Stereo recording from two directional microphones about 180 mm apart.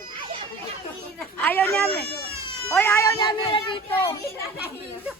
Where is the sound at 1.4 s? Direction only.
10° left (ahead or behind).